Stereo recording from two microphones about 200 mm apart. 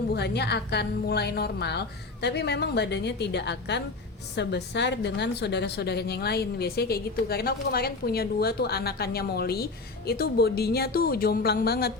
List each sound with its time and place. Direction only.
0.1 s a woman's voice: 55° left (ahead or behind)